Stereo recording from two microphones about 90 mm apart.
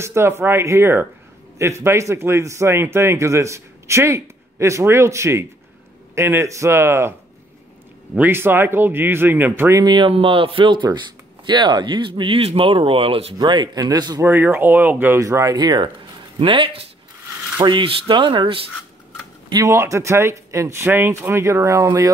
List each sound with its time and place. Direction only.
0.0 s a man's voice: 30° right (ahead or behind)
9.8 s speech: 65° right (ahead or behind); by 13.3 s 90° right
13.4 s speech: 55° right (ahead or behind)
14.2 s speech: 25° right (ahead or behind)
15.1 s speech: 35° right (ahead or behind)
16.3 s speech: 75° right (ahead or behind)
17.6 s speech: 60° right (ahead or behind)
19.5 s a man's voice: 35° right (ahead or behind)